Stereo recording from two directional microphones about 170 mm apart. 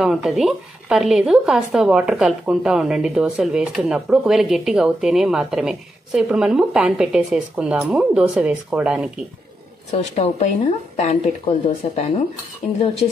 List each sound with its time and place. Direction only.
0.0 s a woman's voice: centre (ahead or behind)
9.8 s a woman's voice: 40° left (ahead or behind)